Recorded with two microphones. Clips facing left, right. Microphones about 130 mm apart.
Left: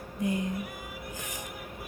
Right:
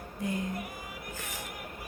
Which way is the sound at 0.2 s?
20° left (ahead or behind).